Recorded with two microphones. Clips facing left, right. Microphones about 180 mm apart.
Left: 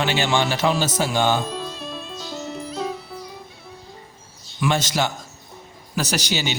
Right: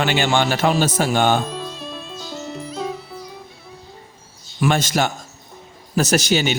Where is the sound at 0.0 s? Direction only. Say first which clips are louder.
Right 2 dB; 50° right (ahead or behind).